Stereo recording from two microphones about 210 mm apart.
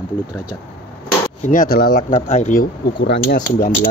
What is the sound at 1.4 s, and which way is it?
Speech, 40° left (ahead or behind).